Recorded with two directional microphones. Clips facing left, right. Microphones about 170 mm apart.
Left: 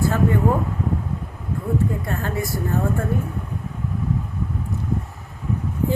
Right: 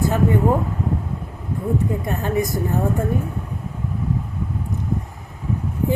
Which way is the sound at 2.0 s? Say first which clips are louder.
Right 4 dB; 20° right (ahead or behind).